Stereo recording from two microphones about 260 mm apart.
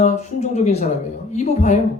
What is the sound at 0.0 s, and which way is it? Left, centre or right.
Speech, left.